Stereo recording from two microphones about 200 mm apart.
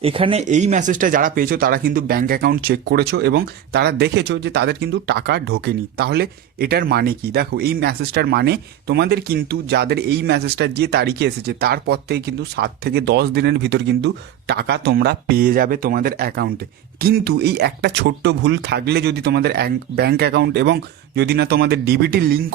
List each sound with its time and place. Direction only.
0.0 s speech: 25° right (ahead or behind); by 22.5 s 50° right (ahead or behind)